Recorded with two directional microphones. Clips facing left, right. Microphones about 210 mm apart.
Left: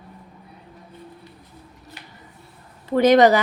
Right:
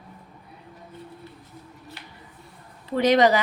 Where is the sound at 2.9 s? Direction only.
50° left (ahead or behind).